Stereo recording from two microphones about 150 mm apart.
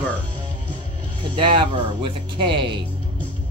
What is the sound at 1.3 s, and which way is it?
Speech, 35° right (ahead or behind).